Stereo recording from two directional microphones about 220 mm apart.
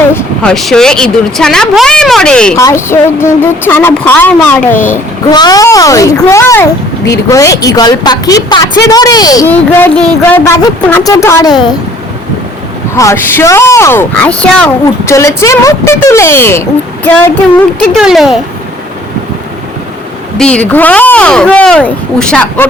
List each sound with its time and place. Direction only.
0.1 s speech: 5° left (ahead or behind)
13.0 s speech: 10° left (ahead or behind)
20.4 s speech: 5° left (ahead or behind)